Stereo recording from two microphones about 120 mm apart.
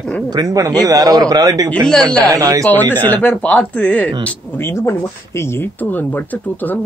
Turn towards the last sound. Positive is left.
turn(degrees=15)  # may be behind; listen again after turning